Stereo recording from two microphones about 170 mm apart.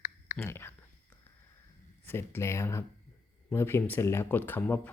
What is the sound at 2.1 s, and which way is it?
Speech, 15° left (ahead or behind).